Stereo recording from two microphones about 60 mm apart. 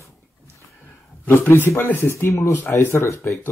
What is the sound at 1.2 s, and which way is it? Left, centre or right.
A man's voice, left.